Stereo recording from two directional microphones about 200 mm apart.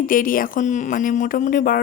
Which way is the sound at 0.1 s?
45° left (ahead or behind).